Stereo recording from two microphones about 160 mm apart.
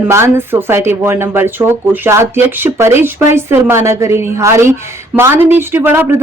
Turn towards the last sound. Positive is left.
turn(degrees=-15)  # may be behind; listen again after turning